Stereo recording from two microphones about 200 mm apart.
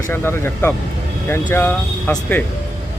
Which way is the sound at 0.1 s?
10° left (ahead or behind).